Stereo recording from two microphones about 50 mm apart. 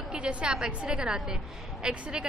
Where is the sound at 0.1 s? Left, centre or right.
Right.